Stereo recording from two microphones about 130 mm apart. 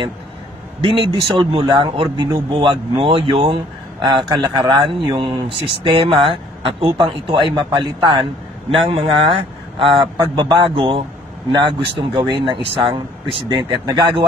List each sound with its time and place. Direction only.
0.7 s a man's voice: 45° right (ahead or behind)